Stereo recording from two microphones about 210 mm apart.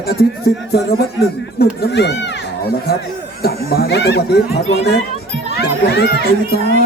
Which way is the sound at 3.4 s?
50° left (ahead or behind).